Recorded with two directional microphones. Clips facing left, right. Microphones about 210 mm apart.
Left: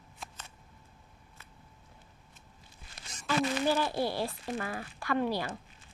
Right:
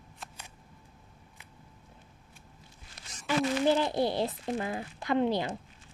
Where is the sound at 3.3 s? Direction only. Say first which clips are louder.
Right 3 dB; 20° right (ahead or behind).